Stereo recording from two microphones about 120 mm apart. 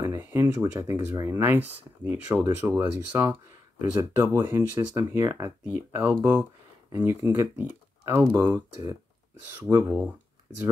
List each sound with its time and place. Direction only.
0.0 s speech: 25° right (ahead or behind)
9.7 s speech: 20° right (ahead or behind)